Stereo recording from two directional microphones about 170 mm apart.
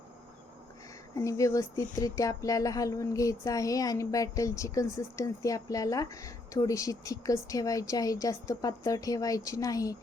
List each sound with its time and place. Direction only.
1.1 s speech: 20° left (ahead or behind)